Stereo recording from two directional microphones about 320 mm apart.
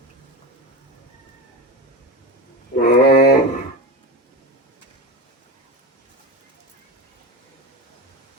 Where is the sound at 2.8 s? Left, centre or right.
Left.